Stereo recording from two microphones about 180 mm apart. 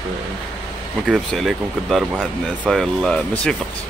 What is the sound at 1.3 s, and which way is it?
Speech, centre (ahead or behind).